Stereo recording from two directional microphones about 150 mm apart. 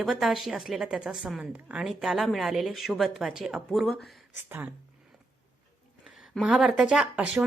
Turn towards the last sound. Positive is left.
turn(degrees=-5)  # may be behind; listen again after turning